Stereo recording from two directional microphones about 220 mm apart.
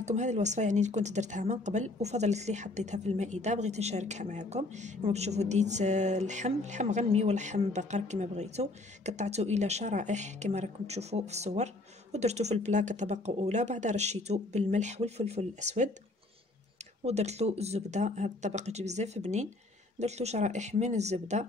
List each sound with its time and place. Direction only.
0.0 s speech: 30° right (ahead or behind)
17.0 s speech: 30° right (ahead or behind)